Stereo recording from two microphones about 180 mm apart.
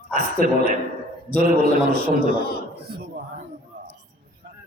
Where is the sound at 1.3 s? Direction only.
60° right (ahead or behind).